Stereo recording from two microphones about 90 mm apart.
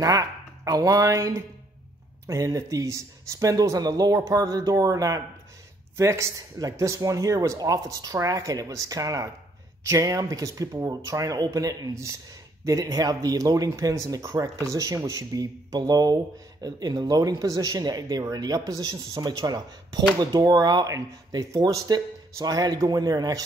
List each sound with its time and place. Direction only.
0.0 s speech: 45° right (ahead or behind)